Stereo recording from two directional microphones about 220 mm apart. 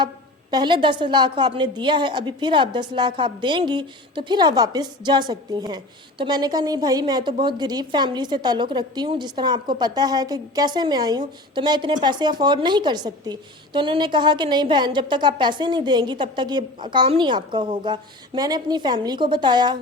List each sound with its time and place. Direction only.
0.5 s a woman's voice: 20° right (ahead or behind)